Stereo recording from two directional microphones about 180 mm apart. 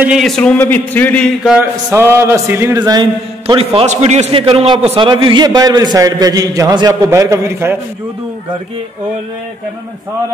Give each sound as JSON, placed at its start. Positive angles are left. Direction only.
{"t": 0.0, "sound": "speech", "side_deg": 0}
{"t": 1.6, "sound": "a man's voice", "side_deg": -15}